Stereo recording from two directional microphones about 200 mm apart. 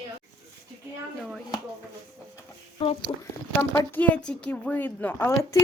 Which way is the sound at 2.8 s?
25° left (ahead or behind).